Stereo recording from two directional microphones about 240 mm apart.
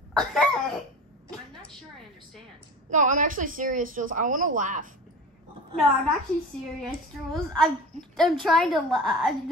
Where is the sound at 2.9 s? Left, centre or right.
Right.